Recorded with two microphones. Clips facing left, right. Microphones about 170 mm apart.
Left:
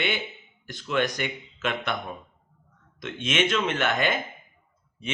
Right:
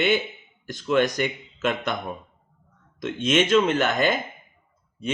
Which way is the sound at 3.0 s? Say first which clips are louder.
Right 5 dB; 40° right (ahead or behind).